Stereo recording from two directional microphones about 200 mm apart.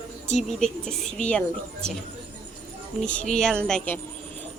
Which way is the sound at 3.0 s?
5° left (ahead or behind).